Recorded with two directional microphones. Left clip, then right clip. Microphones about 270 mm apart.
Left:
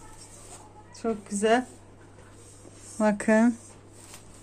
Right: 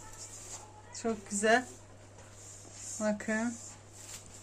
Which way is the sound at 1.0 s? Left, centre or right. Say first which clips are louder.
Left 4 dB; centre.